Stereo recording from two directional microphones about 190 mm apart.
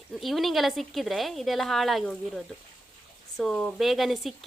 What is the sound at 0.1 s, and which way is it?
Speech, centre (ahead or behind).